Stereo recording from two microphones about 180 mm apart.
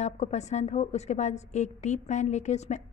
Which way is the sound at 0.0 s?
40° left (ahead or behind).